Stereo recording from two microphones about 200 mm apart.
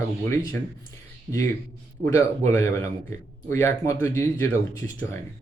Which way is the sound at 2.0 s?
15° left (ahead or behind).